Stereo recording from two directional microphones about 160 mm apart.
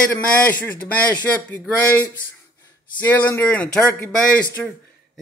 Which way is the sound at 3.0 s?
15° left (ahead or behind).